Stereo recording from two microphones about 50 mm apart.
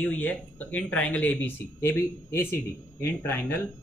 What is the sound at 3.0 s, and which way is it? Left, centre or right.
Speech, left.